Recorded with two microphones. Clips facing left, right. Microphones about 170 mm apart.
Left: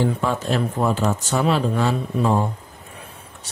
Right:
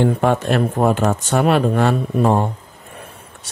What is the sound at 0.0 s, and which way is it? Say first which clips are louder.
Speech: right 5 dB; 60° right (ahead or behind).